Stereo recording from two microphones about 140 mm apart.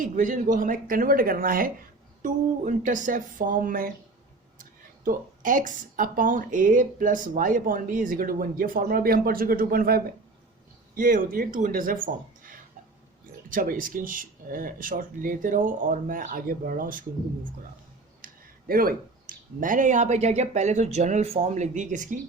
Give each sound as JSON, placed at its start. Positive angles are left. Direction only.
{"t": 0.0, "sound": "speech", "side_deg": -75}
{"t": 2.2, "sound": "speech", "side_deg": -65}
{"t": 5.0, "sound": "speech", "side_deg": -75}
{"t": 13.5, "sound": "speech", "side_deg": -80}
{"t": 18.2, "sound": "a sound", "side_deg": -85}
{"t": 18.7, "sound": "speech", "side_deg": -90}